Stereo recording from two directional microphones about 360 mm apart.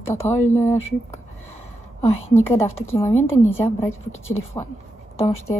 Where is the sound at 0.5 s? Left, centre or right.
Centre.